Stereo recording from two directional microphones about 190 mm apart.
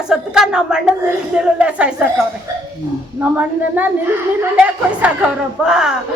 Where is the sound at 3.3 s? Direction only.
10° right (ahead or behind).